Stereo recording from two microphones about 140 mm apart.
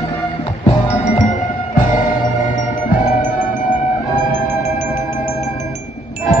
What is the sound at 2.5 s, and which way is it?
Music, 70° left (ahead or behind).